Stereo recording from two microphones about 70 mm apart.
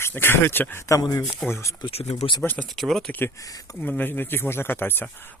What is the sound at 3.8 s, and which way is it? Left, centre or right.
Speech, left.